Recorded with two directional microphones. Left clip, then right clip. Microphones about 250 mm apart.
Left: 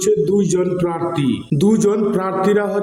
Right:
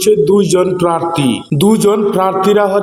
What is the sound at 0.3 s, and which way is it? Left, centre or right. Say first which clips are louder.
A man's voice: right 6 dB; centre.